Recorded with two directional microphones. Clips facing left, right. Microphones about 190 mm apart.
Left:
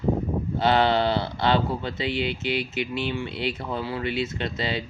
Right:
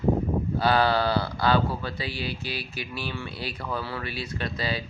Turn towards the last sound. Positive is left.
turn(degrees=25)  # may be behind; listen again after turning